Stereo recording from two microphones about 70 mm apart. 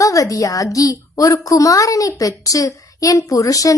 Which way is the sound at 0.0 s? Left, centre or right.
Left.